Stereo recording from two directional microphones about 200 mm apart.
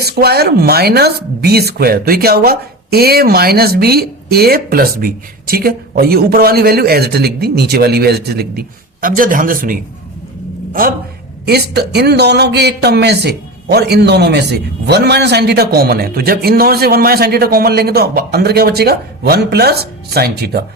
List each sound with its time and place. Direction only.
0.0 s a man's voice: 50° right (ahead or behind)